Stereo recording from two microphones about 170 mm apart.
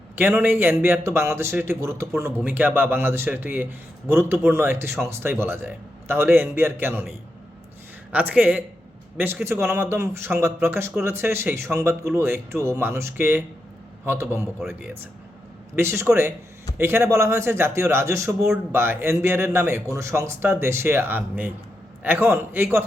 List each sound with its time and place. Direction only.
0.2 s speech: 10° right (ahead or behind)
8.1 s speech: 10° right (ahead or behind)